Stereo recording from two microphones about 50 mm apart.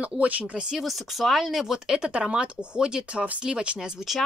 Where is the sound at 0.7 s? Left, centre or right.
Centre; by 3.7 s right.